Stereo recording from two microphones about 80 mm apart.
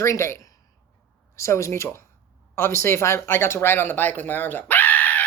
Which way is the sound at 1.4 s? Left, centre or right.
Left.